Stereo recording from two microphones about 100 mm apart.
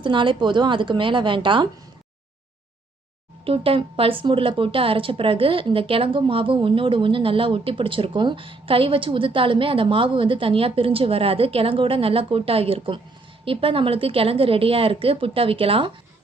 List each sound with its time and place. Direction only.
0.0 s a woman's voice: 55° right (ahead or behind)
3.4 s a woman's voice: 70° right (ahead or behind)